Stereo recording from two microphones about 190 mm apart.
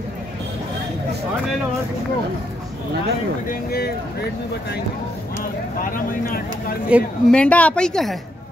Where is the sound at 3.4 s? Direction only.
50° left (ahead or behind).